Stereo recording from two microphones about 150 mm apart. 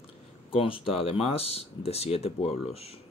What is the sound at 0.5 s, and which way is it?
Speech, 35° left (ahead or behind).